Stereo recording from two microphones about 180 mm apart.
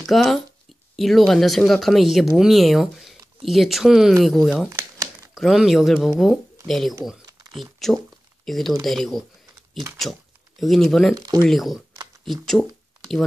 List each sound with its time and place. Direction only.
0.0 s speech: centre (ahead or behind)
4.6 s a sound: 15° right (ahead or behind)
5.3 s speech: centre (ahead or behind)
10.6 s speech: centre (ahead or behind)
11.1 s speech: 20° right (ahead or behind)
11.4 s speech: centre (ahead or behind)